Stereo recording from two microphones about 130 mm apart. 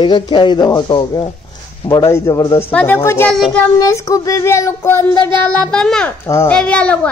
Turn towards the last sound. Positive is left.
turn(degrees=10)  # may be behind; listen again after turning